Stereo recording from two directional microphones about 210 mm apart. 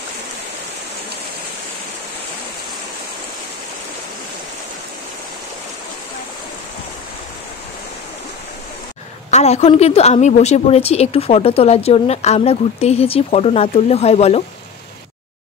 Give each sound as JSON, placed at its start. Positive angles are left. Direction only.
{"t": 9.3, "sound": "a woman's voice", "side_deg": 30}